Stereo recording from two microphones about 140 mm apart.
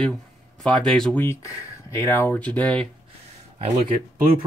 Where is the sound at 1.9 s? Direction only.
20° left (ahead or behind).